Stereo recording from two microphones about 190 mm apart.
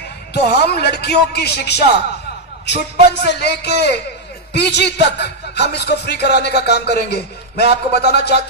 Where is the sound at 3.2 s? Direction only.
60° left (ahead or behind).